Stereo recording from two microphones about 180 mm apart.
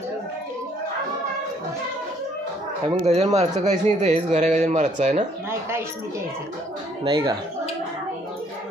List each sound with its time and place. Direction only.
2.9 s a man's voice: 35° right (ahead or behind)
5.5 s speech: 15° right (ahead or behind)
7.1 s speech: 20° right (ahead or behind)